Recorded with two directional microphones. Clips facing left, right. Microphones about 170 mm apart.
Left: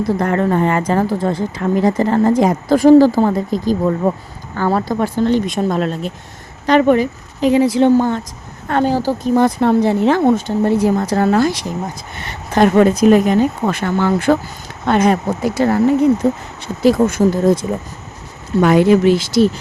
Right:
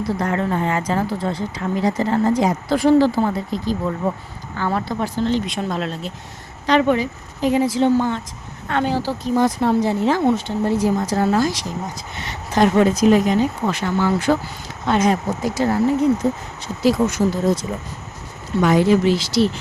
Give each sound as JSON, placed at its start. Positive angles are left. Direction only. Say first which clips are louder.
{"t": 0.1, "sound": "speech", "louder": "left 5 dB", "side_deg": 50}
{"t": 7.4, "sound": "a woman's voice", "louder": "left 5 dB", "side_deg": 75}
{"t": 7.9, "sound": "speech", "louder": "left 5 dB", "side_deg": 45}